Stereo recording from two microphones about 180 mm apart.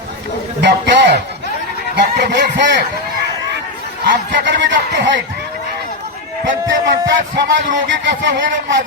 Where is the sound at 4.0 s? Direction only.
75° right (ahead or behind).